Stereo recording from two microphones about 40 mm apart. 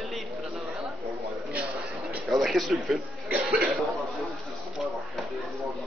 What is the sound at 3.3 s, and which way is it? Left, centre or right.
Cough, right.